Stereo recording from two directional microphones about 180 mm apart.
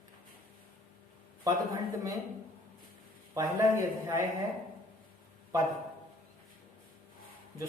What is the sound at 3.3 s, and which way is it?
Speech, 15° right (ahead or behind).